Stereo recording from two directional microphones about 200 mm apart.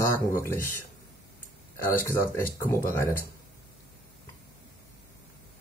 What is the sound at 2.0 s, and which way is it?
Speech, 15° left (ahead or behind).